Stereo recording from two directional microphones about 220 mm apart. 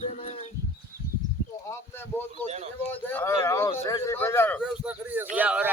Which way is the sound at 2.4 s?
30° right (ahead or behind).